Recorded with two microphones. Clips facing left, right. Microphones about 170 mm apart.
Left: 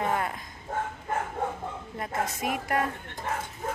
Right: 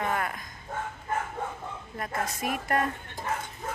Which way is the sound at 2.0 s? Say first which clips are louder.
Left 1 dB; 20° left (ahead or behind).